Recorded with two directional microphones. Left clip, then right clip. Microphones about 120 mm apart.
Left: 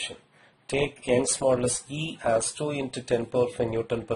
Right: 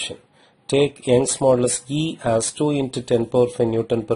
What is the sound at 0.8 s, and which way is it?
Speech, 35° right (ahead or behind).